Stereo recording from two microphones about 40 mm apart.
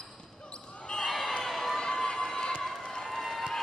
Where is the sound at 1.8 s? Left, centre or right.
Left.